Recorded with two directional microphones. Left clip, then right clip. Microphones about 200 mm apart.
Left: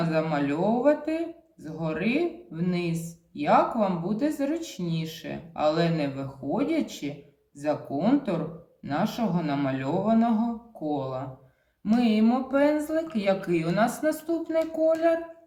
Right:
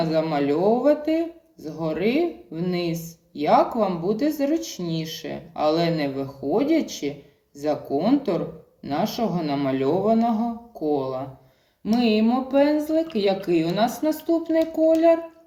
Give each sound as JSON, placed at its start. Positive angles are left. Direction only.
{"t": 0.0, "sound": "speech", "side_deg": 35}